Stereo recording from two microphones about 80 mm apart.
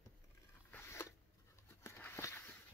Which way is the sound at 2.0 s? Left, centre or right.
Left.